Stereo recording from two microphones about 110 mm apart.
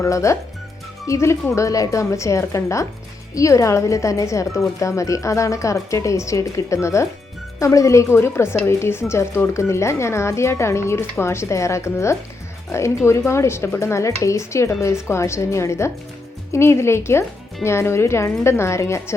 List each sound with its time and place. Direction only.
0.0 s a woman's voice: 30° left (ahead or behind)